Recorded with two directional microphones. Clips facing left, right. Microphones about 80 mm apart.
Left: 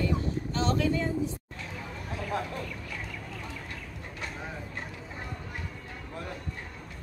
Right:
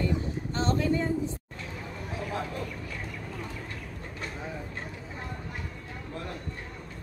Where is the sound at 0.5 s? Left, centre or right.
Right.